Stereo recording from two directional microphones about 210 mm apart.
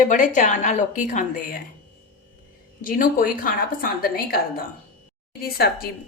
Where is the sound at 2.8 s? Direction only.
40° left (ahead or behind).